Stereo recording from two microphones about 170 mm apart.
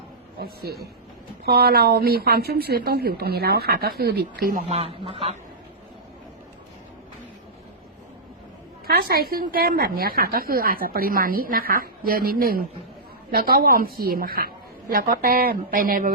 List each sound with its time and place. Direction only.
0.3 s a woman's voice: 65° right (ahead or behind)
4.7 s speech: 35° right (ahead or behind)
8.9 s a woman's voice: 65° right (ahead or behind)